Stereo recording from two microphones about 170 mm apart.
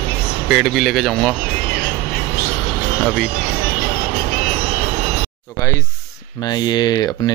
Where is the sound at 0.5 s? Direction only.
Centre (ahead or behind).